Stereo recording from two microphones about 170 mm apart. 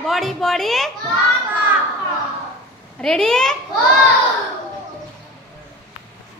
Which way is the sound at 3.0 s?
5° left (ahead or behind).